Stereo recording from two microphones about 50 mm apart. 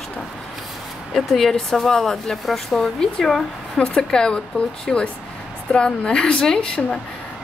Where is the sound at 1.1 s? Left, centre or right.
Centre.